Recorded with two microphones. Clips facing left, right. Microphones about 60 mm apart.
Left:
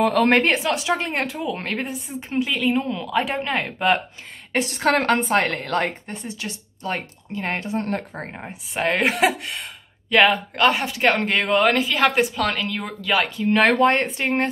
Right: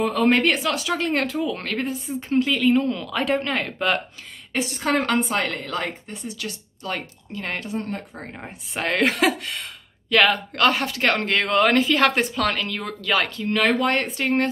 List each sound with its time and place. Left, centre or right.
0.0 s a woman's voice: left
0.4 s a woman's voice: left
4.6 s a woman's voice: left
5.0 s a woman's voice: left
6.2 s speech: left
8.4 s a woman's voice: centre
13.7 s speech: left